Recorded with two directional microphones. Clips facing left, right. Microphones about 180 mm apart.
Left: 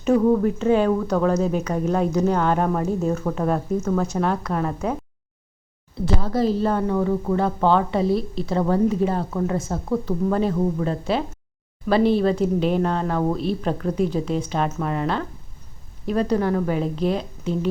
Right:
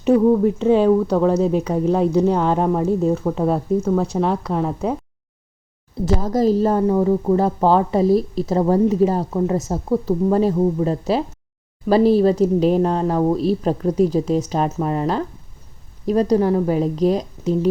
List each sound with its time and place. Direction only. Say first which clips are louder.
0.1 s speech: right 3 dB; 15° right (ahead or behind)
0.6 s speech: right 4 dB; 30° right (ahead or behind)
6.1 s a woman's voice: right 4 dB; 40° right (ahead or behind); by 10.8 s 25° right (ahead or behind)
10.8 s a woman's voice: right 3 dB; 35° right (ahead or behind)